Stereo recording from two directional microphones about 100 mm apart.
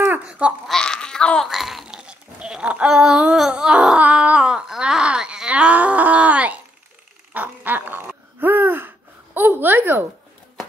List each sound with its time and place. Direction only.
0.2 s babbling: 10° right (ahead or behind)
0.7 s babbling: 5° left (ahead or behind)
1.5 s a sound: centre (ahead or behind); by 10.0 s 20° right (ahead or behind)